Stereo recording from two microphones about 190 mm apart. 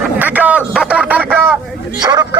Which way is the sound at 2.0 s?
20° right (ahead or behind).